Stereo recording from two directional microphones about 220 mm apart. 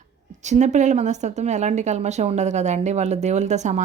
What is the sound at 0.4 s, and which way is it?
Speech, 30° right (ahead or behind).